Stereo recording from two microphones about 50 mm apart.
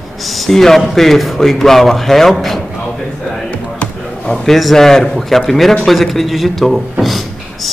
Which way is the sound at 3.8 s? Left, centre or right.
Centre.